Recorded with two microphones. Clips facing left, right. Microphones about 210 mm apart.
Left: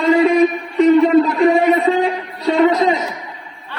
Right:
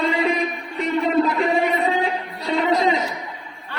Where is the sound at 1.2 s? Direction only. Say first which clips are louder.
Left 7 dB; 50° left (ahead or behind).